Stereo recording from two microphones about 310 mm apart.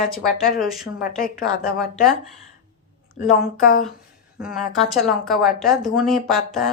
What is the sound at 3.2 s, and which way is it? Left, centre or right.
Speech, left.